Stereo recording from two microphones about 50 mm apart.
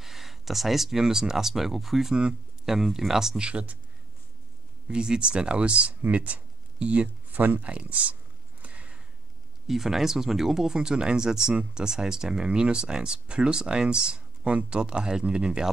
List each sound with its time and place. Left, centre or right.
0.0 s speech: centre
2.1 s speech: centre
2.7 s speech: centre
3.3 s speech: right
4.8 s speech: centre
8.6 s a sound: right
9.7 s speech: centre